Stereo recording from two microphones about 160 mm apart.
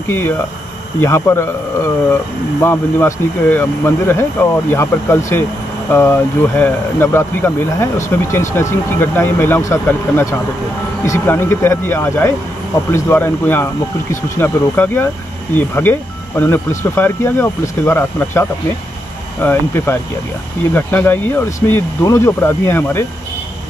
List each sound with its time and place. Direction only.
1.0 s speech: 15° left (ahead or behind)